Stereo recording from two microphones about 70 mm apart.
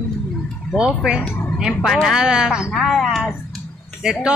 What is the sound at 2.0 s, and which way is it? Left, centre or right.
Speech, centre.